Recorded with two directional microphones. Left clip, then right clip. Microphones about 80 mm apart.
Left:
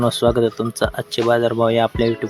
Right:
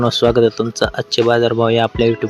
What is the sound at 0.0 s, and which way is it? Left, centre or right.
Speech, right.